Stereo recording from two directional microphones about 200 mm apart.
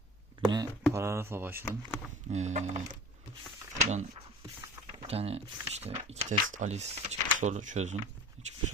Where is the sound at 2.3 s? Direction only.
35° right (ahead or behind).